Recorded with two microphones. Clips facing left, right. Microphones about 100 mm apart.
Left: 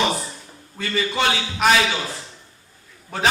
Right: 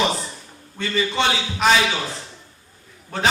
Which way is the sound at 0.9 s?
5° left (ahead or behind).